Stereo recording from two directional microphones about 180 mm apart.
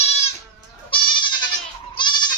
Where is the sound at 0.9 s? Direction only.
25° left (ahead or behind).